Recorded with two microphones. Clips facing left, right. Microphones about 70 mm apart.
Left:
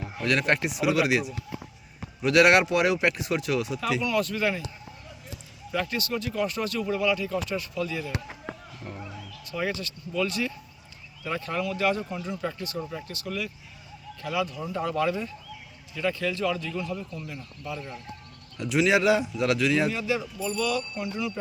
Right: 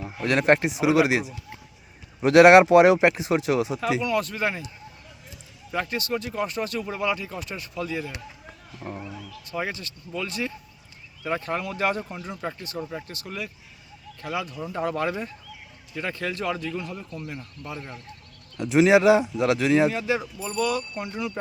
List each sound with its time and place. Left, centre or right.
0.3 s speech: right
4.0 s speech: right
5.7 s speech: right
12.4 s a man's voice: right
19.5 s speech: right
19.9 s a man's voice: right